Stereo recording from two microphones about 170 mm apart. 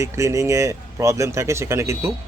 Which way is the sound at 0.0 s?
15° right (ahead or behind).